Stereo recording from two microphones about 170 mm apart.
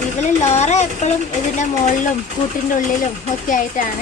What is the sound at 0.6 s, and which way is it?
Speech, 40° left (ahead or behind).